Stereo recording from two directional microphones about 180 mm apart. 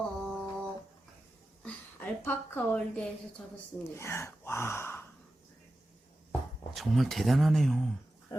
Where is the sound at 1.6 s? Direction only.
10° left (ahead or behind).